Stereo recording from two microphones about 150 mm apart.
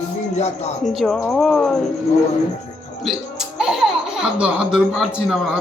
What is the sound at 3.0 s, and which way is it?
Speech, centre (ahead or behind).